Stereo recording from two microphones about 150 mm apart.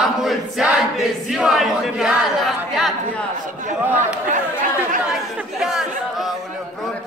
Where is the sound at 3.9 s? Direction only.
55° right (ahead or behind).